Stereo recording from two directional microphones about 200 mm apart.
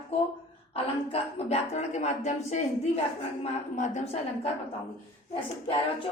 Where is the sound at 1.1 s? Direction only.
30° left (ahead or behind).